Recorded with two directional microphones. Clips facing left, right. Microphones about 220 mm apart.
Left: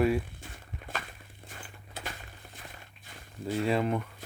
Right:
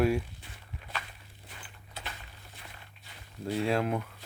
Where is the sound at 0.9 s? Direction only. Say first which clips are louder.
Left 2 dB; 50° left (ahead or behind).